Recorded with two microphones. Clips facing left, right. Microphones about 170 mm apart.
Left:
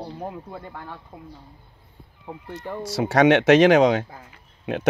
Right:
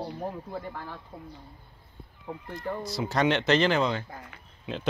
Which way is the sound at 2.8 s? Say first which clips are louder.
Left 9 dB; 75° left (ahead or behind).